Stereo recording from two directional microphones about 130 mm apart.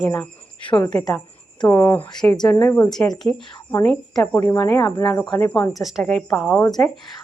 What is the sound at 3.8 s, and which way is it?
Speech, 5° left (ahead or behind).